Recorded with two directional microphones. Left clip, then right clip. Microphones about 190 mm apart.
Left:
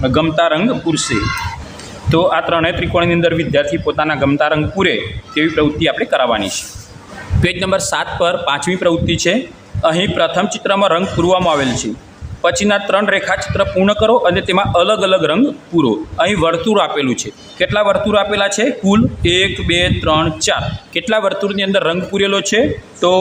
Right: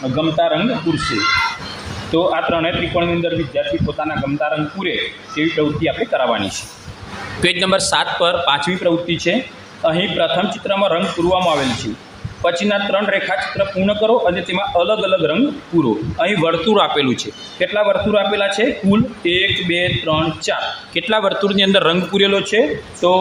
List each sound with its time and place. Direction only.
0.2 s a man's voice: 20° left (ahead or behind)
2.1 s a man's voice: 15° left (ahead or behind)
7.4 s a man's voice: 5° left (ahead or behind)